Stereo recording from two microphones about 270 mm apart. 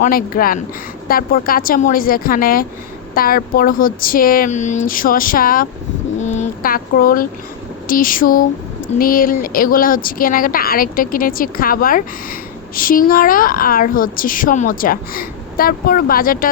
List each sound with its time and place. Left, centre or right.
0.0 s speech: left